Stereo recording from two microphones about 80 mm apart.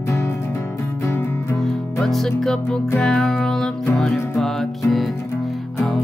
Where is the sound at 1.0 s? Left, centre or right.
Left.